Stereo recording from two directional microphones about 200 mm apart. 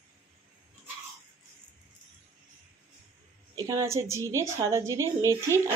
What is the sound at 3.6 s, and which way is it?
A woman's voice, 15° right (ahead or behind).